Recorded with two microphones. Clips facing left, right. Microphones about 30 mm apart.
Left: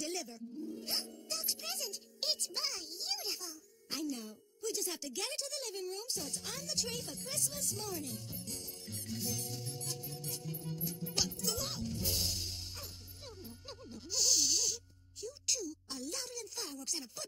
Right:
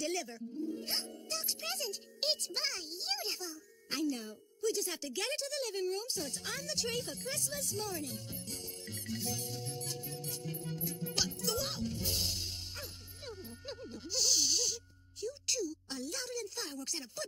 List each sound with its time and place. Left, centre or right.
0.0 s speech: right
0.7 s music: centre
1.6 s a child's voice: right
4.6 s music: centre
4.9 s a child's voice: right
7.3 s music: centre
7.7 s a child's voice: right
8.5 s music: right
14.1 s a sound: centre
15.2 s a woman's voice: right